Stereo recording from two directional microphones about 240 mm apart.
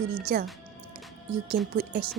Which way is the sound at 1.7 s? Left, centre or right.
Right.